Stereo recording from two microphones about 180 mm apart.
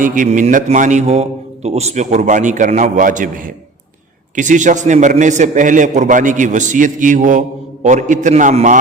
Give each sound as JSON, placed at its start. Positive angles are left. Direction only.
{"t": 0.0, "sound": "a man's voice", "side_deg": -45}